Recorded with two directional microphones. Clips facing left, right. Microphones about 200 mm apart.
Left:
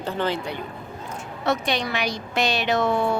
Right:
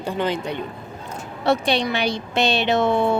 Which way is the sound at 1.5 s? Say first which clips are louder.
Right 4 dB; 30° right (ahead or behind).